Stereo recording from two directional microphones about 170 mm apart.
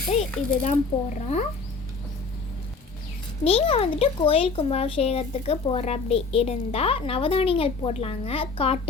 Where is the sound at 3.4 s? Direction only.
35° left (ahead or behind).